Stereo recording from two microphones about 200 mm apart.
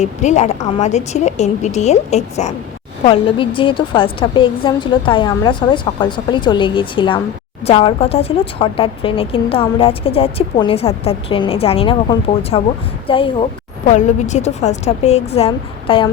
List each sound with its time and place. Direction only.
0.0 s a woman's voice: 35° left (ahead or behind)
13.8 s a woman's voice: 35° left (ahead or behind)